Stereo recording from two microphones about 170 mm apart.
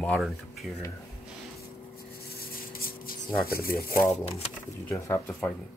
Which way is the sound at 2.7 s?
60° left (ahead or behind).